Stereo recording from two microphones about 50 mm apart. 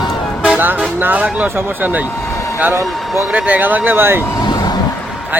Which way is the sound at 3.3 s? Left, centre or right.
Right.